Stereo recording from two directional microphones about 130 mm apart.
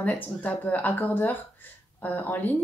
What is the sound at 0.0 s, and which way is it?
Speech, 10° left (ahead or behind).